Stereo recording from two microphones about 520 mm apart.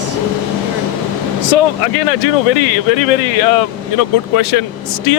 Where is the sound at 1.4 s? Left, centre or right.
Left.